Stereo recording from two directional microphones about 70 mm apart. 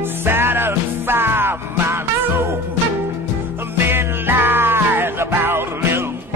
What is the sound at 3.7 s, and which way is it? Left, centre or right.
Music, right.